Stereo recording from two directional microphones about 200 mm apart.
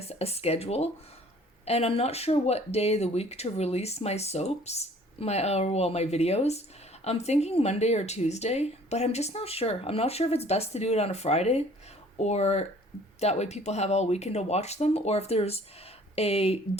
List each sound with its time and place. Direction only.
0.1 s speech: 30° left (ahead or behind)